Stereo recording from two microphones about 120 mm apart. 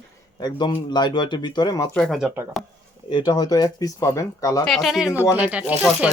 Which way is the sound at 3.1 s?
35° left (ahead or behind).